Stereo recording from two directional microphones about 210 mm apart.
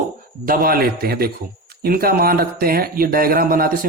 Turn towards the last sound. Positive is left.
turn(degrees=-45)  # may be behind; listen again after turning